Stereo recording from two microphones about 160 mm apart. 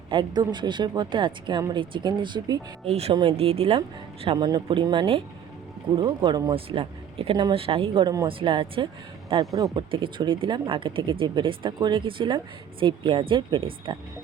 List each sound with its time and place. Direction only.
0.1 s speech: 30° right (ahead or behind)
2.8 s speech: 40° right (ahead or behind)
9.3 s speech: 20° right (ahead or behind)